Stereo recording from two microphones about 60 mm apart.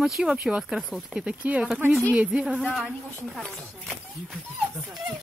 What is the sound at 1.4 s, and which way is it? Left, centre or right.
Speech, right.